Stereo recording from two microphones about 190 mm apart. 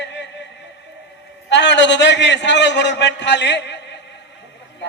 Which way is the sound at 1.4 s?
65° left (ahead or behind).